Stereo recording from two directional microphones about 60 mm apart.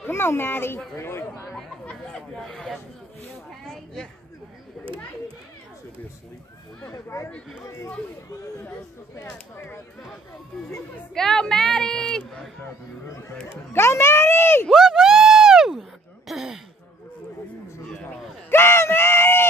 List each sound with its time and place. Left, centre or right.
0.1 s a child's voice: left
1.9 s a sound: centre
3.6 s speech: centre
7.1 s speech: left
9.1 s speech: left
11.1 s speech: centre
13.5 s a child's voice: left
14.7 s a sound: centre
16.3 s speech: centre
17.8 s a sound: centre
18.5 s screaming: left